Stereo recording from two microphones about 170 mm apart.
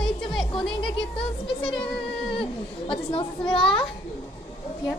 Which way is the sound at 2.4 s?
30° left (ahead or behind).